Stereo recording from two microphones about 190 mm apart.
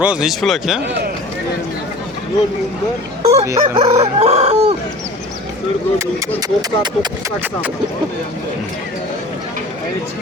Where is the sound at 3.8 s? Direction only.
35° right (ahead or behind).